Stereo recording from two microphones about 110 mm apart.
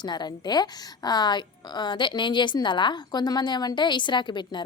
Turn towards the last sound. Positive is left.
turn(degrees=45)  # may be behind; listen again after turning